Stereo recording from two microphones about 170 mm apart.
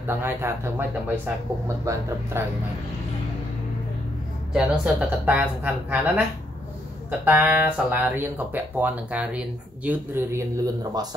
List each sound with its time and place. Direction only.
0.0 s speech: 15° right (ahead or behind)
4.6 s speech: 10° right (ahead or behind)